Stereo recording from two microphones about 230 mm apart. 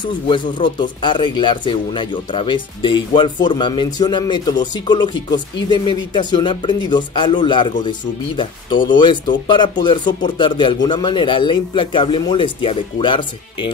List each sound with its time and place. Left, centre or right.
0.0 s speech: centre